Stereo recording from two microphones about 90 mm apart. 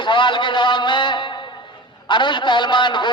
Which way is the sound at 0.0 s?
60° left (ahead or behind).